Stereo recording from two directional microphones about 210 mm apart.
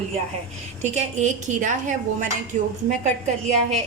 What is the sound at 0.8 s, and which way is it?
A woman's voice, 35° right (ahead or behind).